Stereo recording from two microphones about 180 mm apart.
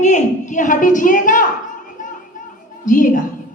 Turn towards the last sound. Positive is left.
turn(degrees=45)  # may be behind; listen again after turning